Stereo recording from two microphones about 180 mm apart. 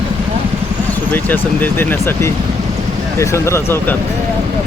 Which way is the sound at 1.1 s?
10° left (ahead or behind).